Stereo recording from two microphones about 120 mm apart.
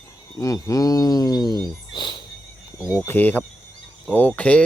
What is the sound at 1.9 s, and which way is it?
Music, 40° left (ahead or behind).